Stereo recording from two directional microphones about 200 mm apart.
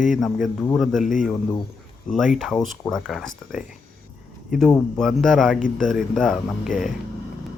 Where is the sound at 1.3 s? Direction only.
20° left (ahead or behind).